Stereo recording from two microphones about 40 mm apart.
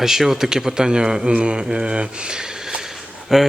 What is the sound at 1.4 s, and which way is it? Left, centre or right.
Mantra, right.